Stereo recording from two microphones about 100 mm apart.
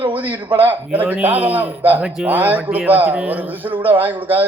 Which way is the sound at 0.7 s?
15° right (ahead or behind).